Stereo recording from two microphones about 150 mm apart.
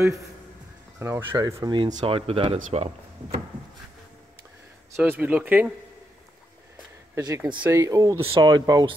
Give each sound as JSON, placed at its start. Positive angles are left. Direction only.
{"t": 0.9, "sound": "speech", "side_deg": -20}
{"t": 4.9, "sound": "speech", "side_deg": -15}
{"t": 7.2, "sound": "speech", "side_deg": -25}
{"t": 8.2, "sound": "speech", "side_deg": -40}
{"t": 8.5, "sound": "speech", "side_deg": -25}